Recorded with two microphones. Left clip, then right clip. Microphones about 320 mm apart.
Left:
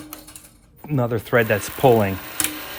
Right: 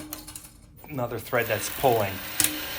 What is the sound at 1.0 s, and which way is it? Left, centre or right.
Speech, left.